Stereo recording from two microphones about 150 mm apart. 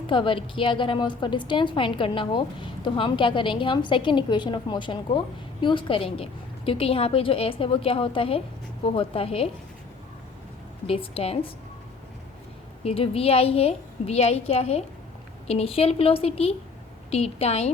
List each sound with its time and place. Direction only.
0.1 s a woman's voice: 35° left (ahead or behind)
10.8 s a woman's voice: 40° left (ahead or behind)
12.8 s a woman's voice: 40° left (ahead or behind)